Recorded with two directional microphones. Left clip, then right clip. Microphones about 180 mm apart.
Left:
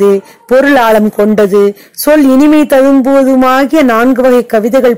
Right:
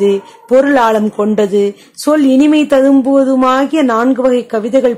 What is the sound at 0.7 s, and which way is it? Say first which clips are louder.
Speech: left 4 dB; 25° left (ahead or behind).